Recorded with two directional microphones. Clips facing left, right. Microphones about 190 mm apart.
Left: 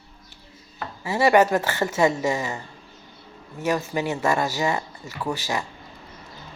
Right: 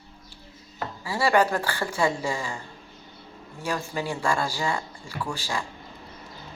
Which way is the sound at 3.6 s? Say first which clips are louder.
Left 5 dB; 20° left (ahead or behind).